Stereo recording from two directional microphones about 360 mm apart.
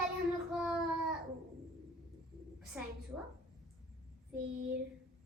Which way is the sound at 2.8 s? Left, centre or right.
Centre.